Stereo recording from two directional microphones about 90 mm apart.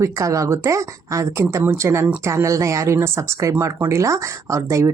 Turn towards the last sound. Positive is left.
turn(degrees=-35)  # may be behind; listen again after turning